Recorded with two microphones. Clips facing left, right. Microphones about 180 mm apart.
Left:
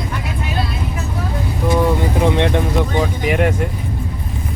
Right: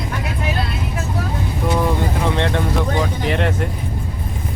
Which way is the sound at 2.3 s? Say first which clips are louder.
Left 3 dB; 15° left (ahead or behind).